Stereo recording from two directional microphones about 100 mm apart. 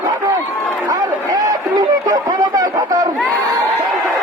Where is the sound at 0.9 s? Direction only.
40° right (ahead or behind).